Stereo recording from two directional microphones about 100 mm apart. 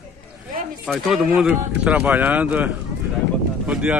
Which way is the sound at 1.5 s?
15° right (ahead or behind).